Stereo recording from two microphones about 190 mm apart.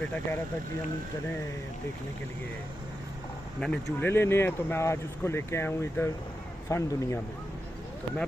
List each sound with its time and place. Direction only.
0.0 s speech: 10° left (ahead or behind)
3.6 s speech: 10° left (ahead or behind)